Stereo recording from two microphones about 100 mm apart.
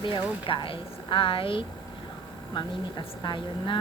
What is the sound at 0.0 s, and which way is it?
A woman's voice, 55° left (ahead or behind).